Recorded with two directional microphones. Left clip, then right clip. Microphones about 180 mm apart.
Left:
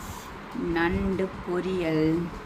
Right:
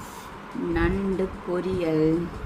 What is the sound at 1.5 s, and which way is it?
Speech, centre (ahead or behind).